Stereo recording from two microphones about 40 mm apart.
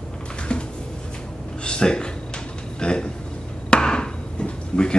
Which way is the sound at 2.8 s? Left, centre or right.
Left.